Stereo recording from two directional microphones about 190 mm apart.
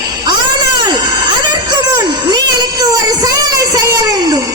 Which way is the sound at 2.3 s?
20° right (ahead or behind).